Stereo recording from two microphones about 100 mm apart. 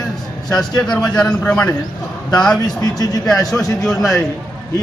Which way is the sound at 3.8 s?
Centre (ahead or behind).